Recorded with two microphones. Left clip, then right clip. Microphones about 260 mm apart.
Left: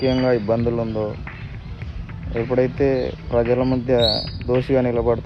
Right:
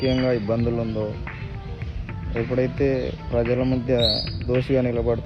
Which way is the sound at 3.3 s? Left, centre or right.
Left.